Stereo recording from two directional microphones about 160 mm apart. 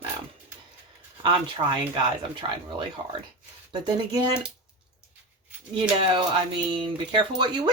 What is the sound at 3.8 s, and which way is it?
Speech, 25° right (ahead or behind).